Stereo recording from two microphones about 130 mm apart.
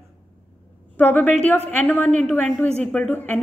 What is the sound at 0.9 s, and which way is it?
A woman's voice, 10° left (ahead or behind).